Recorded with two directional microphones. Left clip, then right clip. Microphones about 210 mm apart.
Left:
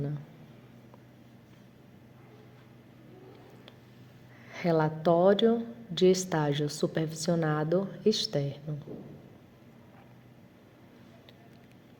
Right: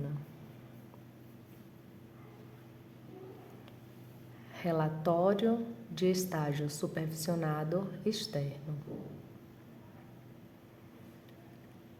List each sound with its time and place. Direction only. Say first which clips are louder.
4.5 s a woman's voice: left 6 dB; 25° left (ahead or behind)